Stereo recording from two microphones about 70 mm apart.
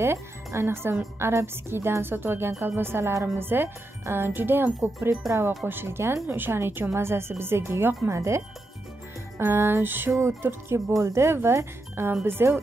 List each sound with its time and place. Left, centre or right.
0.0 s a woman's voice: right
5.2 s speech: centre
5.7 s a woman's voice: right
9.4 s a woman's voice: right